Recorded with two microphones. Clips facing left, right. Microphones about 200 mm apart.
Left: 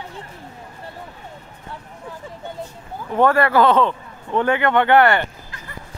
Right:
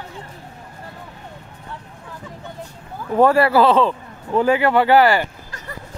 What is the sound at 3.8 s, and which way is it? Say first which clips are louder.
Speech: right 1 dB; 5° right (ahead or behind).